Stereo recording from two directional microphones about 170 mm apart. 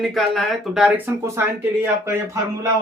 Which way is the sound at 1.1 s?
15° right (ahead or behind).